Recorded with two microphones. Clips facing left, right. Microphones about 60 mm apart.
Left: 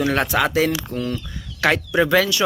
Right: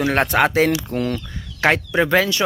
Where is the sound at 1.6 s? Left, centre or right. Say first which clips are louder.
Right 1 dB; right.